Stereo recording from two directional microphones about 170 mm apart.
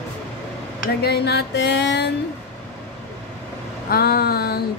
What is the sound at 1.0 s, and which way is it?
Music, 70° left (ahead or behind).